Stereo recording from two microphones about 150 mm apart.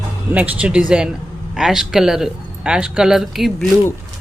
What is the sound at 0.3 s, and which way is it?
Speech, 10° right (ahead or behind).